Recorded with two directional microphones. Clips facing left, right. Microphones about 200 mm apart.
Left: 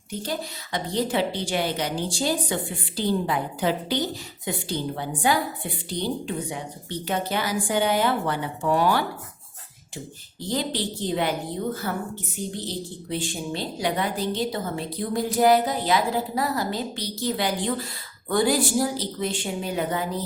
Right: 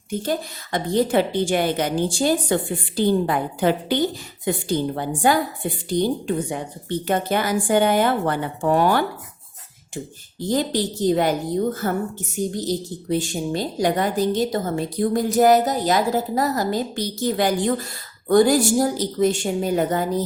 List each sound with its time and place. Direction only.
0.1 s a woman's voice: 50° right (ahead or behind)
10.4 s a woman's voice: 45° right (ahead or behind)